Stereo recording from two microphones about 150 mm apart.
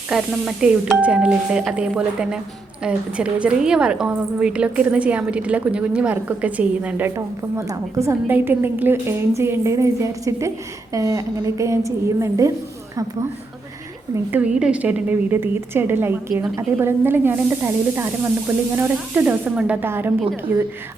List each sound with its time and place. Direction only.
0.1 s a woman's voice: 5° right (ahead or behind); by 12.5 s 20° right (ahead or behind)
14.3 s a woman's voice: 10° right (ahead or behind)